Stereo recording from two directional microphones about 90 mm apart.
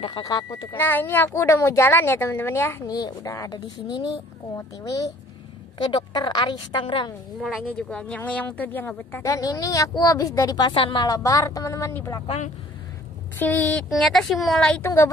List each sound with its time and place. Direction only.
0.2 s speech: 45° left (ahead or behind)
0.7 s a woman's voice: 25° left (ahead or behind)
2.9 s speech: 45° left (ahead or behind)
4.6 s a woman's voice: 40° left (ahead or behind)
5.8 s a woman's voice: 60° left (ahead or behind)
7.3 s speech: centre (ahead or behind)
7.6 s a woman's voice: 10° left (ahead or behind)
9.2 s a woman's voice: 40° left (ahead or behind)
10.7 s a woman's voice: 70° left (ahead or behind)
11.1 s a woman's voice: 40° left (ahead or behind)
13.4 s speech: 20° left (ahead or behind)
13.8 s speech: centre (ahead or behind)
14.8 s a woman's voice: 30° left (ahead or behind)